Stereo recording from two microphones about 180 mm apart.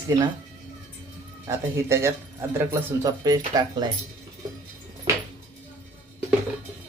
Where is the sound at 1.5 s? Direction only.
15° right (ahead or behind).